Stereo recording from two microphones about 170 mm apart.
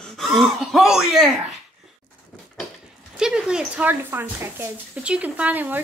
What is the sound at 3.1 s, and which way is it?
Speech, 5° right (ahead or behind).